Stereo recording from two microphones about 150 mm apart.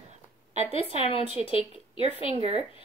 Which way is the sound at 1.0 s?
40° left (ahead or behind).